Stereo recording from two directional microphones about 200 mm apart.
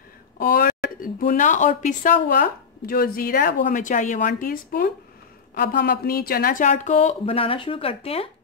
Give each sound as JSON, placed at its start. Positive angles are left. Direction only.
{"t": 0.4, "sound": "speech", "side_deg": 45}